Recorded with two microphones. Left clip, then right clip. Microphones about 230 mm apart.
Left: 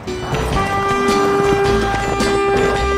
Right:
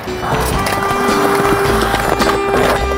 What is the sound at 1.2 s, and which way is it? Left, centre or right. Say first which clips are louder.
Boat: right 2 dB; right.